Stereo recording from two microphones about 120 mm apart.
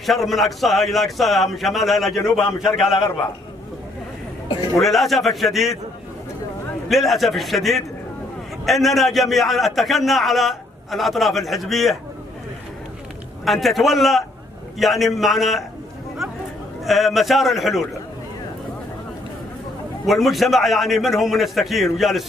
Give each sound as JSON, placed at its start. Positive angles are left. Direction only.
{"t": 0.0, "sound": "a man's voice", "side_deg": 0}
{"t": 4.7, "sound": "a man's voice", "side_deg": 0}
{"t": 6.9, "sound": "a man's voice", "side_deg": 0}
{"t": 13.5, "sound": "a man's voice", "side_deg": 0}
{"t": 16.8, "sound": "a man's voice", "side_deg": 0}
{"t": 20.1, "sound": "a man's voice", "side_deg": 0}